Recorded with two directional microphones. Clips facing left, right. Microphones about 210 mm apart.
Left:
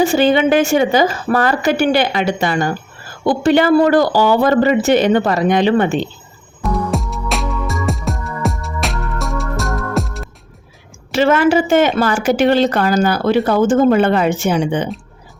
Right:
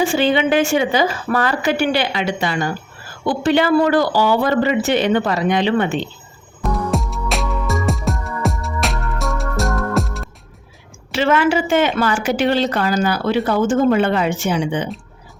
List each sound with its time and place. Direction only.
0.0 s a woman's voice: 40° left (ahead or behind)
6.6 s music: centre (ahead or behind)
11.1 s a woman's voice: 40° left (ahead or behind)